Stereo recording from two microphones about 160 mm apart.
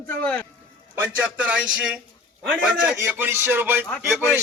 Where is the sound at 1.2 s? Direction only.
5° right (ahead or behind).